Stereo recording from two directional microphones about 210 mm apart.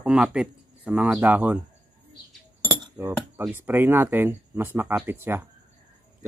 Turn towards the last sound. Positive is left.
turn(degrees=-10)  # may be behind; listen again after turning